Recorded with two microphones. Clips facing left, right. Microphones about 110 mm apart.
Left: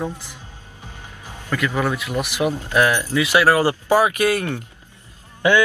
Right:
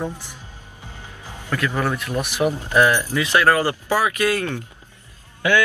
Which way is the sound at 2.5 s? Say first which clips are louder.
Right 1 dB; 15° right (ahead or behind).